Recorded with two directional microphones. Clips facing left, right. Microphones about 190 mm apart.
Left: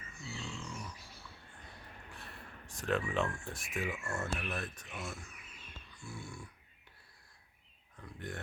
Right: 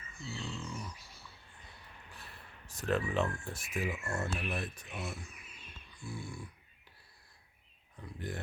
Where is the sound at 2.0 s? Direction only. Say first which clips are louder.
Left 2 dB; centre (ahead or behind).